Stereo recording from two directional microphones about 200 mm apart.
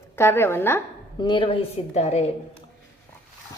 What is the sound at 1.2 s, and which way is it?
A woman's voice, 25° left (ahead or behind).